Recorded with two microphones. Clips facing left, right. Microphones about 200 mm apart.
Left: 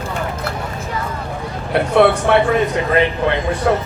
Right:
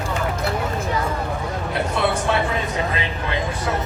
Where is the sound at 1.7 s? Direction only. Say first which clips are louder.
Left 10 dB; 60° left (ahead or behind).